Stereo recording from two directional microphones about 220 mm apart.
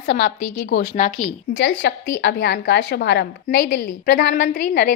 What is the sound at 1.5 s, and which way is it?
A woman's voice, 55° left (ahead or behind).